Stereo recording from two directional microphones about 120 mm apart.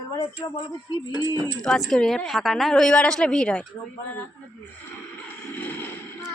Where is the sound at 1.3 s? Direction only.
30° right (ahead or behind).